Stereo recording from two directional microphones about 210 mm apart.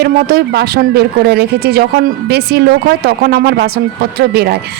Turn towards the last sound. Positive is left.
turn(degrees=-50)  # may be behind; listen again after turning